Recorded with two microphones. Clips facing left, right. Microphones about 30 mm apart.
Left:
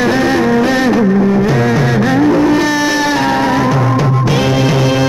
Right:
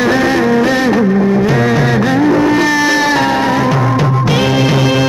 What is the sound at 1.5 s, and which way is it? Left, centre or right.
Music, right.